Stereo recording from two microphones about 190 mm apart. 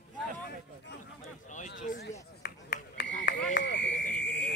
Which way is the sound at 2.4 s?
55° left (ahead or behind).